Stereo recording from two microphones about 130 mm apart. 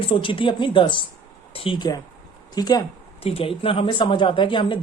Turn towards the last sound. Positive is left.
turn(degrees=40)  # may be behind; listen again after turning